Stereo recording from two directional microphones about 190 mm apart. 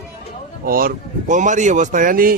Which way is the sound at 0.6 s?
50° right (ahead or behind).